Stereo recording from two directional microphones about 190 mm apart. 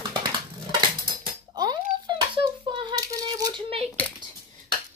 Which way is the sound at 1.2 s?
25° right (ahead or behind).